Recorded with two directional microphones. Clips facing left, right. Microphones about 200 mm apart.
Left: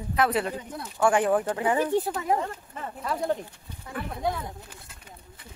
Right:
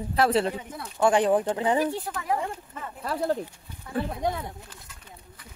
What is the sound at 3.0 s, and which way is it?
Speech, 35° right (ahead or behind).